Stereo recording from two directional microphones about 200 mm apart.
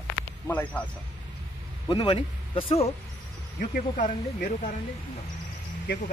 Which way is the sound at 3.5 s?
40° left (ahead or behind).